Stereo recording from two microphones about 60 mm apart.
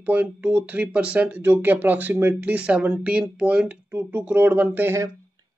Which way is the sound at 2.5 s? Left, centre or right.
Centre.